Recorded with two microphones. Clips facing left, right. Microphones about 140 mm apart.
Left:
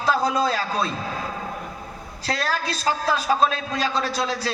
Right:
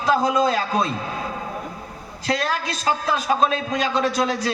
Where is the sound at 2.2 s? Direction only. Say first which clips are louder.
Right 2 dB; 35° left (ahead or behind).